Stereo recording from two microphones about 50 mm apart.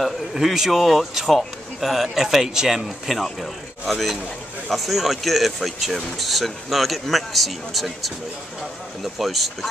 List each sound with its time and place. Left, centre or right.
0.0 s speech: centre